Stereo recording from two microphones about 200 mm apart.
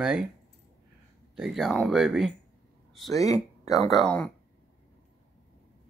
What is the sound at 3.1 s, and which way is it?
Speech, 15° left (ahead or behind).